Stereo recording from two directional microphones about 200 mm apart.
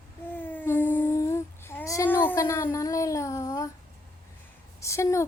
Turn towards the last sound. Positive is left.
turn(degrees=15)  # may be behind; listen again after turning